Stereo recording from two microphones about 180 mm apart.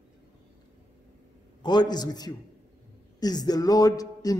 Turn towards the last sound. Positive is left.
turn(degrees=20)  # may be behind; listen again after turning